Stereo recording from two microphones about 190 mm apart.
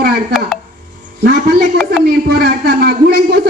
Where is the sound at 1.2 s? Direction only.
55° right (ahead or behind).